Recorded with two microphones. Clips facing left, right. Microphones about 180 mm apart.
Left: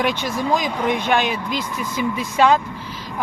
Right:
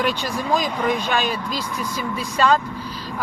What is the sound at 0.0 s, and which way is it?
Speech, 15° left (ahead or behind).